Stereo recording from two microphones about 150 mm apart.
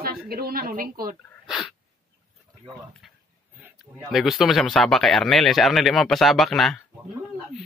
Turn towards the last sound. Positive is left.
turn(degrees=0)  # may be behind; listen again after turning